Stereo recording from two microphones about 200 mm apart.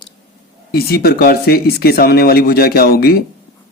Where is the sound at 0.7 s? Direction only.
50° left (ahead or behind).